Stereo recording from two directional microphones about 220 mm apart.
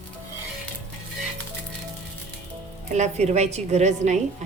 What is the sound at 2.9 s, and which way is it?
A woman's voice, 30° right (ahead or behind).